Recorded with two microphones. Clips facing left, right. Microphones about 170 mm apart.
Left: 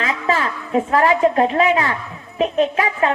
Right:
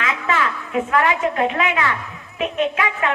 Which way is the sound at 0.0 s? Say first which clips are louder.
Left 2 dB; 35° left (ahead or behind).